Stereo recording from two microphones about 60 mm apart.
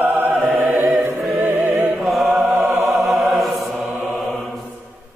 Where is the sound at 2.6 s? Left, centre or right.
Right.